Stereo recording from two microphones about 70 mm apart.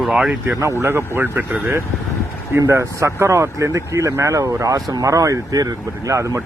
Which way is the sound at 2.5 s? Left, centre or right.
Right.